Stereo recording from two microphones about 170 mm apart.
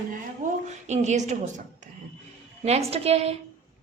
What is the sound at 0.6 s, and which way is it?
Speech, 45° right (ahead or behind).